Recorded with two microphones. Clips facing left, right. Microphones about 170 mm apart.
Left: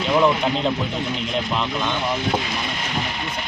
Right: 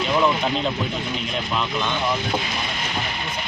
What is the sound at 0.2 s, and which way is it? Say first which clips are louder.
Speech: left 3 dB; 20° left (ahead or behind).